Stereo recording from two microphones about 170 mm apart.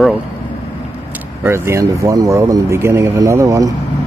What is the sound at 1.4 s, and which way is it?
Speech, 15° right (ahead or behind).